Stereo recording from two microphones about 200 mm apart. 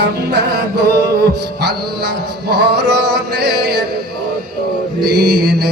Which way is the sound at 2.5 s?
55° right (ahead or behind).